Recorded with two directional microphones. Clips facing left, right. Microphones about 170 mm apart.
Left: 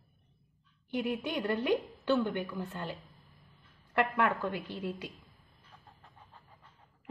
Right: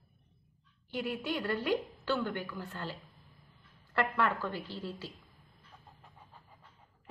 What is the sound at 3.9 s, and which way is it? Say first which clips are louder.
A woman's voice: left 2 dB; 20° left (ahead or behind).